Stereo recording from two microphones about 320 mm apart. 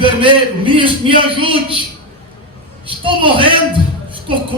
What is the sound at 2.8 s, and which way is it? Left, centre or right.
Speech, centre.